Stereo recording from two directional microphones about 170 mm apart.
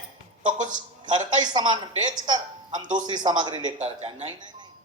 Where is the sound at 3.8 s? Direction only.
40° right (ahead or behind).